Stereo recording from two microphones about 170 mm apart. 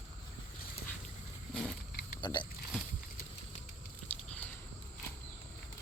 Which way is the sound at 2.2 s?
25° left (ahead or behind).